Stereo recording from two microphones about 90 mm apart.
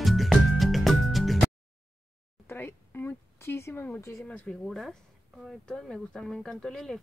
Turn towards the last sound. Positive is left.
turn(degrees=5)  # may be behind; listen again after turning